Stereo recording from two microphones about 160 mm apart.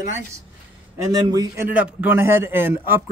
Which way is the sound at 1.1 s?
25° right (ahead or behind).